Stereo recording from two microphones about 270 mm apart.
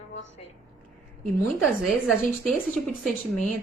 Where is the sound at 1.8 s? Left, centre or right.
Centre.